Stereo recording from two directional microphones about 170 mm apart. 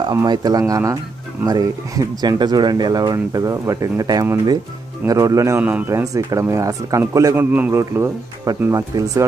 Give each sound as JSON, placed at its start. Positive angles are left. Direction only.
{"t": 0.1, "sound": "a man's voice", "side_deg": -20}